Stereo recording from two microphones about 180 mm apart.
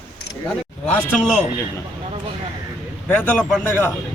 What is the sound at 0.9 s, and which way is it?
Speech, 5° left (ahead or behind).